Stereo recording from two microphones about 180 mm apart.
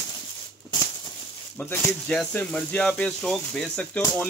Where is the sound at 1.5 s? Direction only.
10° left (ahead or behind).